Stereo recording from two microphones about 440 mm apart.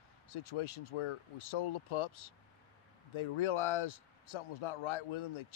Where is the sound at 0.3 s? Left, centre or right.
Left.